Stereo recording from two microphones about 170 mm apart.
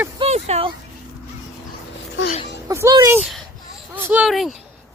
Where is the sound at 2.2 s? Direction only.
90° left.